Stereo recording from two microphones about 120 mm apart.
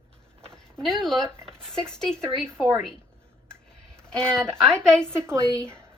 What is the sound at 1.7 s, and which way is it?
Speech, 5° left (ahead or behind).